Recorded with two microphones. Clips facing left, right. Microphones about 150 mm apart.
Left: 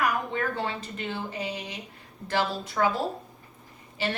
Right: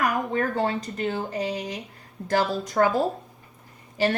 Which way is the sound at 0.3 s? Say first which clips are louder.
Right 5 dB; 45° right (ahead or behind).